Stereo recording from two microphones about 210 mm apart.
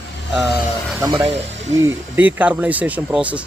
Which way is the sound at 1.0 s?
20° right (ahead or behind).